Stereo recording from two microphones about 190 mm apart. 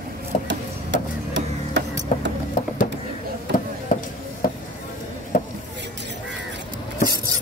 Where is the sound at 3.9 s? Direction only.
45° left (ahead or behind).